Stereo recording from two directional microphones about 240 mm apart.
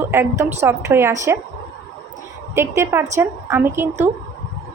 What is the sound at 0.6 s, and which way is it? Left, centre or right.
Speech, centre.